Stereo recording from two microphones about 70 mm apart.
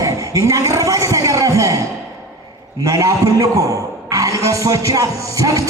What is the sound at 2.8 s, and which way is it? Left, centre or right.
A man's voice, right.